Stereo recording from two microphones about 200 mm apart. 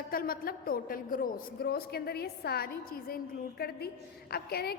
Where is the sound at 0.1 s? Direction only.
45° left (ahead or behind).